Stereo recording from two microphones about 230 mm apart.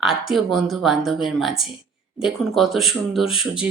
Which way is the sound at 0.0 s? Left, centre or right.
Centre.